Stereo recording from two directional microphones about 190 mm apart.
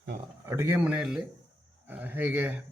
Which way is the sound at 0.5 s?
15° right (ahead or behind).